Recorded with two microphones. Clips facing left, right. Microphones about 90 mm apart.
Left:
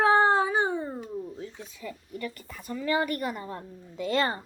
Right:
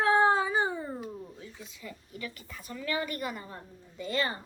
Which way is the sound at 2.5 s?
25° left (ahead or behind).